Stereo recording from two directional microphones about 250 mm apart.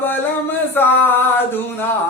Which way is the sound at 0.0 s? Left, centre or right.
Centre.